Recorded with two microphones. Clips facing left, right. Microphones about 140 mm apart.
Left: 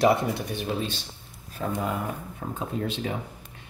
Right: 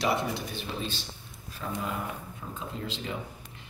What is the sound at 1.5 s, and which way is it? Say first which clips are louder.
Speech: left 5 dB; 50° left (ahead or behind).